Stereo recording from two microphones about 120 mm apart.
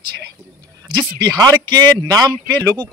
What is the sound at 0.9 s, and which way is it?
A man's voice, 35° right (ahead or behind).